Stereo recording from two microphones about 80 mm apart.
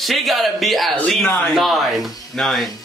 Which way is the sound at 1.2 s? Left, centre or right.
Left.